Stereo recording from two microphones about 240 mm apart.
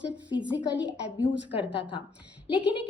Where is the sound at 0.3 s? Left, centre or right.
Centre.